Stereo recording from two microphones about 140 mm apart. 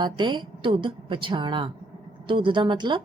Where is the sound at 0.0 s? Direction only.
35° right (ahead or behind).